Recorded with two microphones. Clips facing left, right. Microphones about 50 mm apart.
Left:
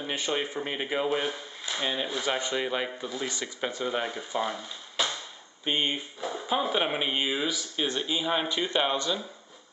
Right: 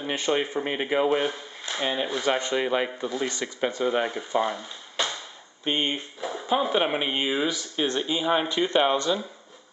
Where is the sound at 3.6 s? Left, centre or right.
Centre.